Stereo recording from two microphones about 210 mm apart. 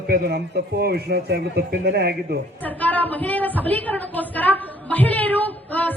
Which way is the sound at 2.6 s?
10° left (ahead or behind).